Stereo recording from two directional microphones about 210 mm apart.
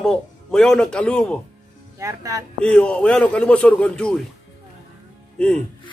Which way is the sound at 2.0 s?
15° right (ahead or behind).